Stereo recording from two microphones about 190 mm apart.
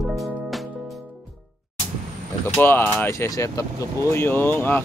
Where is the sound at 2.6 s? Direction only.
10° left (ahead or behind).